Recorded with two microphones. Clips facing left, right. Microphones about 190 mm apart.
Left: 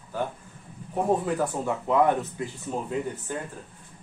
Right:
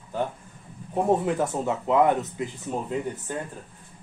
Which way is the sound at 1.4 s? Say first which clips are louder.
Right 1 dB; 20° right (ahead or behind).